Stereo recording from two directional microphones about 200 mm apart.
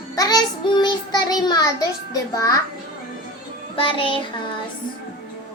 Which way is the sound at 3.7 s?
25° left (ahead or behind).